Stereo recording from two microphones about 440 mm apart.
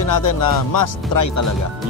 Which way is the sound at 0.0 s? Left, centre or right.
Left.